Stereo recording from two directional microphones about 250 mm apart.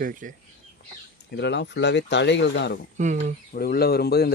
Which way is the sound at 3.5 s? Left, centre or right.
Left.